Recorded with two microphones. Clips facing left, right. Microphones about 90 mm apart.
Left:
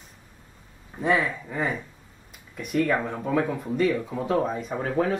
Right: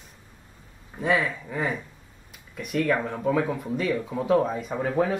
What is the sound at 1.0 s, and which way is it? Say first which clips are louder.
Speech: left 1 dB; centre (ahead or behind).